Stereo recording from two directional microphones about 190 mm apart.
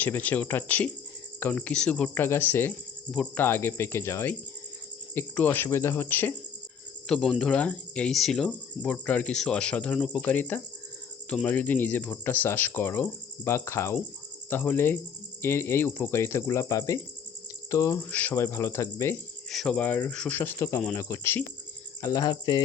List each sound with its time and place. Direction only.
0.0 s speech: 10° left (ahead or behind)
19.5 s speech: 5° left (ahead or behind); by 22.6 s 20° left (ahead or behind)